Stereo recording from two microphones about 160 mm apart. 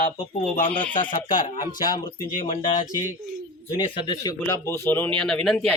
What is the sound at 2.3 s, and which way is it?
Speech, 55° left (ahead or behind).